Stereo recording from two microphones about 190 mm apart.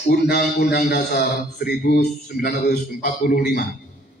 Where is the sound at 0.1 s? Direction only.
55° left (ahead or behind).